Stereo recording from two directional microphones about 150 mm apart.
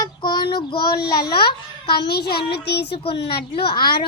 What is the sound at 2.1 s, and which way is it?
Speech, 90° left.